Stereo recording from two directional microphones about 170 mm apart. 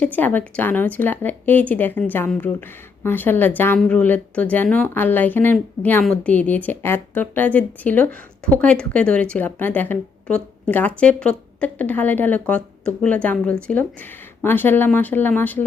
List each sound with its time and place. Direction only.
0.0 s a woman's voice: 10° left (ahead or behind)